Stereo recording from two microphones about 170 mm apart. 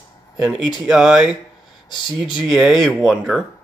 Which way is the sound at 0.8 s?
5° right (ahead or behind).